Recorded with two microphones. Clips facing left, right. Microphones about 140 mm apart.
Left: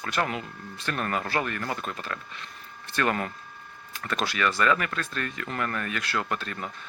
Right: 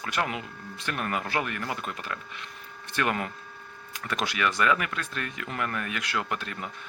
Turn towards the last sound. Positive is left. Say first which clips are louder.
# left 1 dB
turn(degrees=-15)  # may be behind; listen again after turning